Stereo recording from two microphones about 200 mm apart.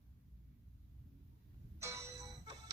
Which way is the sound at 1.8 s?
15° right (ahead or behind).